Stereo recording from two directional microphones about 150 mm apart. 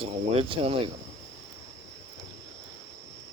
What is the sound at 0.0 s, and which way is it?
Speech, 40° right (ahead or behind).